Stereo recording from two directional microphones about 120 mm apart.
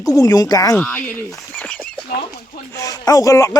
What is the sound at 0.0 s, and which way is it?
Speech, 30° left (ahead or behind).